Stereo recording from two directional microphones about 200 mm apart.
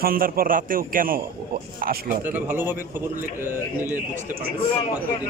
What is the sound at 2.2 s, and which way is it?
Speech, 10° right (ahead or behind).